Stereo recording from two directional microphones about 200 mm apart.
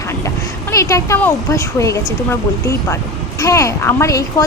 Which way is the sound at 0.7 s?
15° left (ahead or behind).